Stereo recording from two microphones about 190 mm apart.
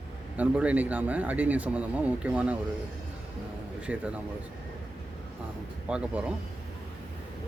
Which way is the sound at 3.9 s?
5° right (ahead or behind).